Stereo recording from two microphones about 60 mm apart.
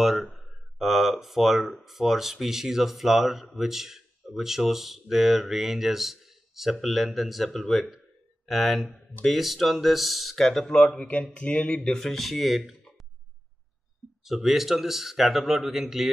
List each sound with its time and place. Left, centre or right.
0.0 s speech: centre
10.9 s speech: left; by 12.7 s centre
14.2 s speech: centre